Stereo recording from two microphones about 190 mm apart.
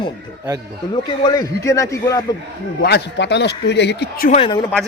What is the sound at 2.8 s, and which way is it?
A man's voice, 60° left (ahead or behind).